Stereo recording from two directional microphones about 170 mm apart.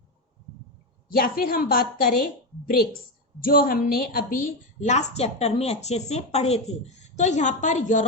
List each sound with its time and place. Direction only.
1.1 s a woman's voice: 60° left (ahead or behind)
3.4 s a woman's voice: 60° left (ahead or behind)